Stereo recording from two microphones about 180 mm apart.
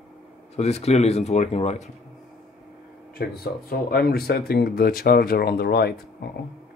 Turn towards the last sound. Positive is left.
turn(degrees=60)  # may be behind; listen again after turning